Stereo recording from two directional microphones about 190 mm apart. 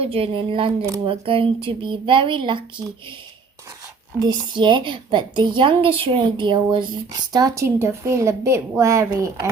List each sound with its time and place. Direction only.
0.0 s a woman's voice: 30° right (ahead or behind)
4.2 s a woman's voice: 25° right (ahead or behind)